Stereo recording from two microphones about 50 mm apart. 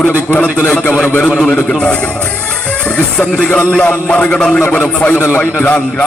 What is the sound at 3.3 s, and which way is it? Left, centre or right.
Music, centre.